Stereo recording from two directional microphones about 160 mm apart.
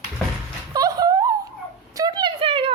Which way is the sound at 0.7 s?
20° right (ahead or behind).